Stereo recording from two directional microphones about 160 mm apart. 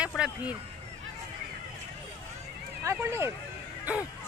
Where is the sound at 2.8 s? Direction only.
15° right (ahead or behind).